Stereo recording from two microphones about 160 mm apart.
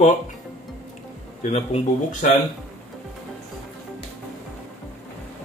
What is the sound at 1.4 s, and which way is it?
Speech, 45° left (ahead or behind).